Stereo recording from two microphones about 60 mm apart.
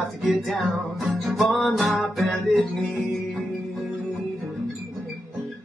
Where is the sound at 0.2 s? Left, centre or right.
Centre.